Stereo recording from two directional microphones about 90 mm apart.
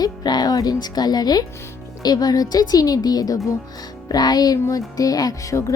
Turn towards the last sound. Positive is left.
turn(degrees=45)  # may be behind; listen again after turning